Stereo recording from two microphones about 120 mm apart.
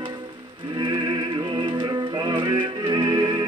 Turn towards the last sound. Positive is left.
turn(degrees=-35)  # may be behind; listen again after turning